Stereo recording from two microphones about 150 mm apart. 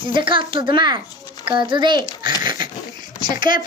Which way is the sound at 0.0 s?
35° right (ahead or behind).